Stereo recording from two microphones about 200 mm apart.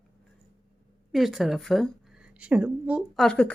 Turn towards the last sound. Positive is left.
turn(degrees=5)  # may be behind; listen again after turning